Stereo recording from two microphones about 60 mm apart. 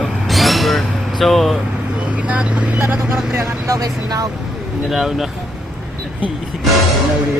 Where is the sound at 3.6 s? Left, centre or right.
Right.